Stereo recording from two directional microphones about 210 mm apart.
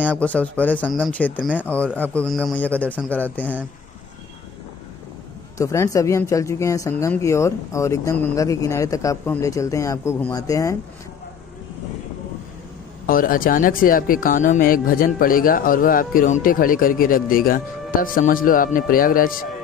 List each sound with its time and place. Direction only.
0.0 s speech: 5° left (ahead or behind)
5.6 s speech: 15° left (ahead or behind)
13.0 s speech: 40° left (ahead or behind)